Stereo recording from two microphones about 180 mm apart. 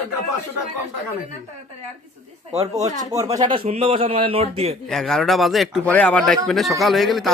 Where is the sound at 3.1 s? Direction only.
20° right (ahead or behind).